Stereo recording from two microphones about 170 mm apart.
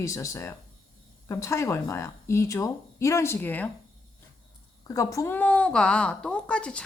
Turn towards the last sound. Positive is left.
turn(degrees=5)  # may be behind; listen again after turning